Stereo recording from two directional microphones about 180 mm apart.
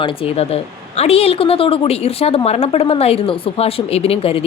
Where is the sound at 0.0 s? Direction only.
35° left (ahead or behind).